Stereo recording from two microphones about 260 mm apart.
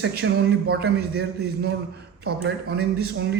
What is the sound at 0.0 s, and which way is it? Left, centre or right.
Speech, right.